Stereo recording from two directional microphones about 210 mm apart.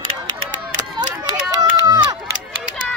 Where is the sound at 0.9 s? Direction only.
20° right (ahead or behind).